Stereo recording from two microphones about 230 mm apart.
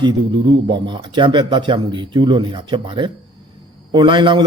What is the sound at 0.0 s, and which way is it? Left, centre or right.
Speech, centre.